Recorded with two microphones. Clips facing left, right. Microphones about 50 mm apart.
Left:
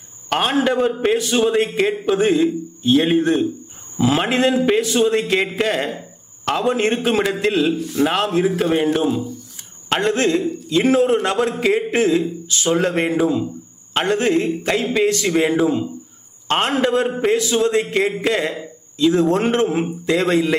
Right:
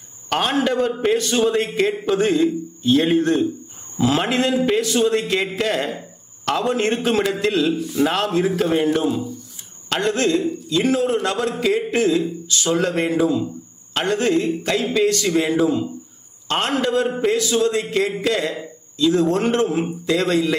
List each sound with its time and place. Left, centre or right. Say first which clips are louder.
0.3 s a man's voice: left 2 dB; centre
7.8 s a man's voice: left 1 dB; left
8.0 s a man's voice: left 2 dB; centre